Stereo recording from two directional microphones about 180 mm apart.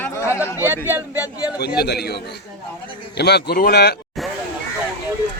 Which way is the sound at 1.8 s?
65° left (ahead or behind).